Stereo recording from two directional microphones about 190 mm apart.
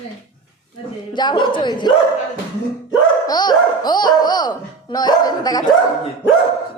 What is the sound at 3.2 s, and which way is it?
Speech, 20° left (ahead or behind).